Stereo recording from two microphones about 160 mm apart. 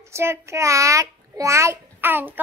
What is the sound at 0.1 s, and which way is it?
A child's voice, 15° right (ahead or behind).